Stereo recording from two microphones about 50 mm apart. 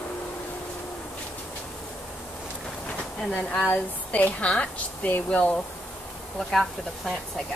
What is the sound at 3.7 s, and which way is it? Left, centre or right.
A woman's voice, left.